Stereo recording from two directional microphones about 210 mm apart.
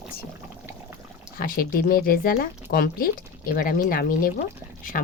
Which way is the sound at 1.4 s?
45° left (ahead or behind).